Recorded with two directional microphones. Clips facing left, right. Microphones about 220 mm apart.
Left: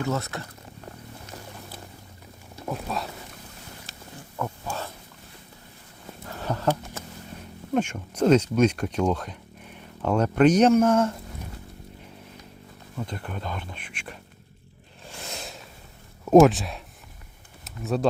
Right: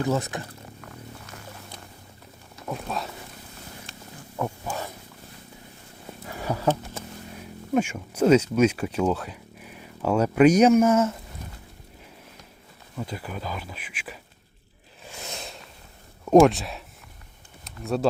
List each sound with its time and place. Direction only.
0.1 s speech: 15° right (ahead or behind)
2.6 s speech: centre (ahead or behind)
4.4 s pig: 15° right (ahead or behind)
6.2 s a sound: 10° right (ahead or behind)
7.7 s speech: 5° right (ahead or behind)
13.0 s speech: 5° right (ahead or behind)
15.3 s a sound: centre (ahead or behind)
16.2 s speech: centre (ahead or behind)